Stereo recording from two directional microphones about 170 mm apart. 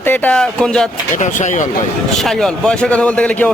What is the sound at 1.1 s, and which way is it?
Speech, 45° left (ahead or behind).